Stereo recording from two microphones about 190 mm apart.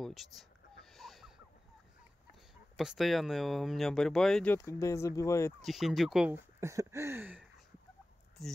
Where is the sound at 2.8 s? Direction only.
Centre (ahead or behind); by 5.5 s 15° left (ahead or behind).